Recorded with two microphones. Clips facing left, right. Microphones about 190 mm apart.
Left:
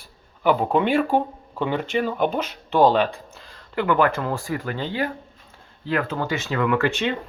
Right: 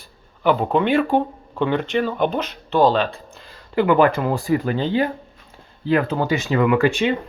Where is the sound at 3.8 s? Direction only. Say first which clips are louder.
Right 4 dB; 15° right (ahead or behind).